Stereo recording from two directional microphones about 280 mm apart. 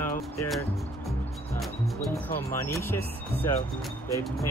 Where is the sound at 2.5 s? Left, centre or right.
Centre.